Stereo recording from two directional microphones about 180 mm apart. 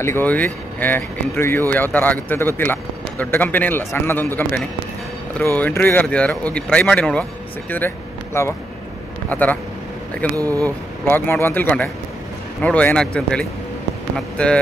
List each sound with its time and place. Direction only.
0.0 s speech: 10° left (ahead or behind)
10.3 s speech: 20° right (ahead or behind)
10.6 s speech: 10° left (ahead or behind)